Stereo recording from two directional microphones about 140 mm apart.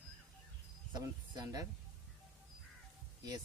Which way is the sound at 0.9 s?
30° right (ahead or behind).